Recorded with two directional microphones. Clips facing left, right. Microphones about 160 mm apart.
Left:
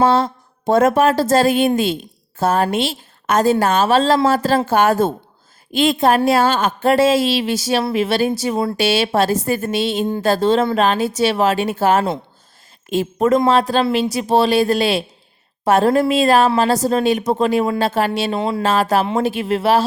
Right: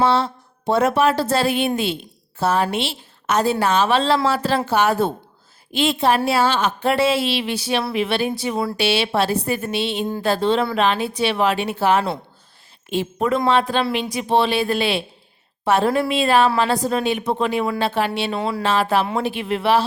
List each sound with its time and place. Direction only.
0.0 s speech: 45° left (ahead or behind)
18.3 s a sound: 25° left (ahead or behind)
18.6 s speech: 45° left (ahead or behind)